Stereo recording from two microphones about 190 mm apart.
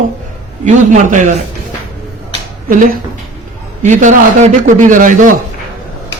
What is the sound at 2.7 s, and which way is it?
A man's voice, 45° right (ahead or behind).